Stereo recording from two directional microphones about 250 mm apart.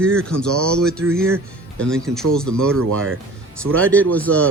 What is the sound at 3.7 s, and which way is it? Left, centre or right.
Speech, centre.